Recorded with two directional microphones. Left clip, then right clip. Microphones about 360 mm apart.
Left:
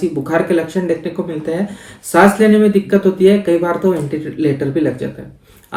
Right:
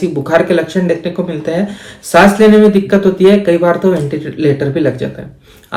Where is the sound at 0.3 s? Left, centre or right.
Centre.